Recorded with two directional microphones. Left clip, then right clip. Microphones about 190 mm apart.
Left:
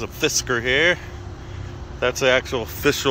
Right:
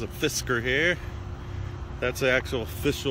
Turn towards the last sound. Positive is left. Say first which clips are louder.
# left 7 dB
turn(degrees=-5)  # may be behind; listen again after turning